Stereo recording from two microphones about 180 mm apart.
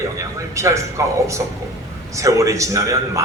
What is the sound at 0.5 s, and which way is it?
A man's voice, 15° right (ahead or behind).